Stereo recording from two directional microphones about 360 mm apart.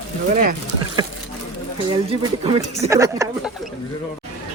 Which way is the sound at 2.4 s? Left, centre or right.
Centre.